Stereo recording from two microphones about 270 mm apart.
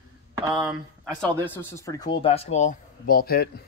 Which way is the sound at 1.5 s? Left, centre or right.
Centre.